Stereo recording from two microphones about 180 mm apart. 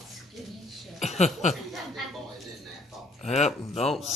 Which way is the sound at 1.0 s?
40° left (ahead or behind).